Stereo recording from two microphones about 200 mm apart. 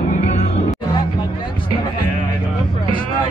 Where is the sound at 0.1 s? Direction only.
35° left (ahead or behind).